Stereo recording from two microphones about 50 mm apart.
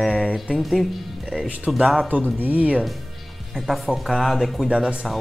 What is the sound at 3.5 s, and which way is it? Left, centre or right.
Speech, centre.